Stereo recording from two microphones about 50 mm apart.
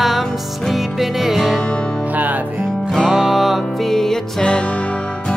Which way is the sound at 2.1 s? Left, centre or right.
Right.